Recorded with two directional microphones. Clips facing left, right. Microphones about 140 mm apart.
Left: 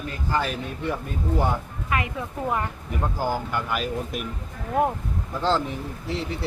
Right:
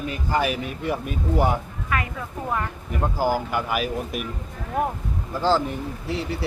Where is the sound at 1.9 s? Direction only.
25° left (ahead or behind).